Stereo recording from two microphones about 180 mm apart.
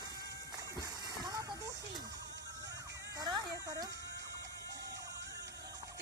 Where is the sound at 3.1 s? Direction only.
20° right (ahead or behind).